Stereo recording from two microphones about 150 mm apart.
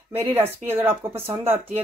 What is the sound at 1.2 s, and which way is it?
Speech, 40° right (ahead or behind).